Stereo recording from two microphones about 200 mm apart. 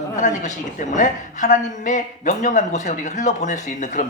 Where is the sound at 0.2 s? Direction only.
40° left (ahead or behind).